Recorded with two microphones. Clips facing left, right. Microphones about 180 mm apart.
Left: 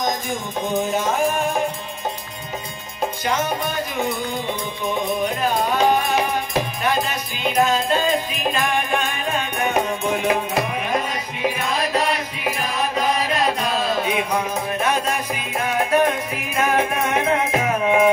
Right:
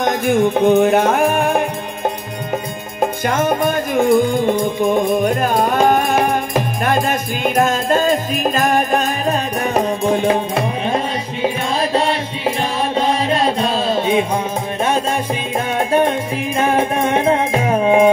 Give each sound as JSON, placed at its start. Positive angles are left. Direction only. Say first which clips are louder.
{"t": 0.0, "sound": "music", "louder": "right 10 dB", "side_deg": -60}